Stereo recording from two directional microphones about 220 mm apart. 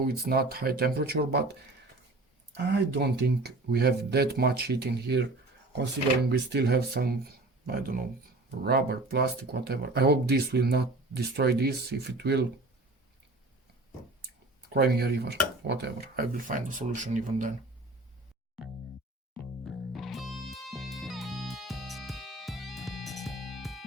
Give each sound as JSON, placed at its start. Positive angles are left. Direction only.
{"t": 0.1, "sound": "speech", "side_deg": -45}
{"t": 2.7, "sound": "speech", "side_deg": -50}
{"t": 14.7, "sound": "speech", "side_deg": -45}
{"t": 19.6, "sound": "music", "side_deg": 0}